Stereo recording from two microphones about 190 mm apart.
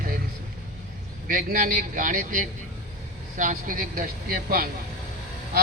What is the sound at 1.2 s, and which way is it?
A man's voice, 50° right (ahead or behind).